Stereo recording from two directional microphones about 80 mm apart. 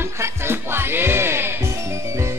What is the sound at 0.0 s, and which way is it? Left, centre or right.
Music, right.